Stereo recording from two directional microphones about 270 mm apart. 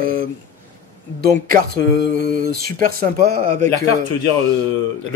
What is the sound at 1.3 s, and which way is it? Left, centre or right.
Speech, right.